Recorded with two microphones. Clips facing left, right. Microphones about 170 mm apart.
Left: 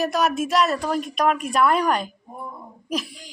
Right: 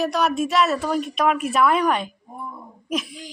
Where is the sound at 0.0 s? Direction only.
Centre (ahead or behind).